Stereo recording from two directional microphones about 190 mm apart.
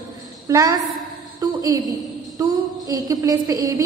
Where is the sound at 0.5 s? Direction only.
20° right (ahead or behind).